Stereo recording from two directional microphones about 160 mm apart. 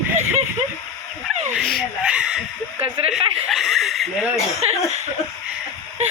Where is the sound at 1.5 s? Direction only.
Centre (ahead or behind).